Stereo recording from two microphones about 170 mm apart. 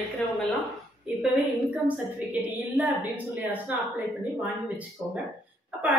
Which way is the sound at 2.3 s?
10° right (ahead or behind).